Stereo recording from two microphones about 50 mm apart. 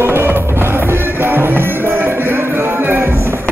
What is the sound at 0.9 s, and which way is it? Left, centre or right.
Music, right.